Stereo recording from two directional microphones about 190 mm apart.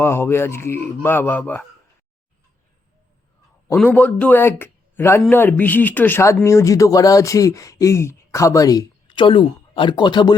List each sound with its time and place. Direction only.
0.0 s speech: 10° left (ahead or behind)
3.9 s speech: 10° left (ahead or behind); by 10.3 s 25° left (ahead or behind)